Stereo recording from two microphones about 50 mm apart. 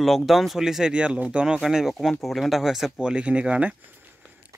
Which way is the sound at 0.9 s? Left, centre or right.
Right.